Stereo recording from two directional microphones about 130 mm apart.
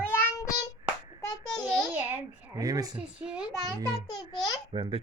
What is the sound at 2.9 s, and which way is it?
Speech, 10° right (ahead or behind).